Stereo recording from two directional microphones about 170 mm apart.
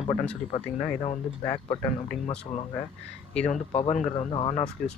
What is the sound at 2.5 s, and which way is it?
Speech, 45° left (ahead or behind).